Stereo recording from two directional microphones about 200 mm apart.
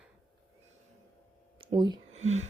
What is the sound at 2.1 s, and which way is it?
Speech, 35° right (ahead or behind).